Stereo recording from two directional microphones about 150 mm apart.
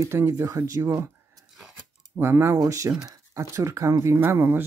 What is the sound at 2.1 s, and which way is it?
Speech, 15° right (ahead or behind).